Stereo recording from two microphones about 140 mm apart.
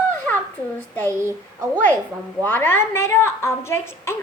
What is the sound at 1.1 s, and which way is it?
Speech, 20° right (ahead or behind).